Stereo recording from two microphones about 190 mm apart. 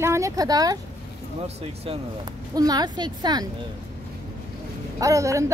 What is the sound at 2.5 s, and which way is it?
Speech, 20° right (ahead or behind).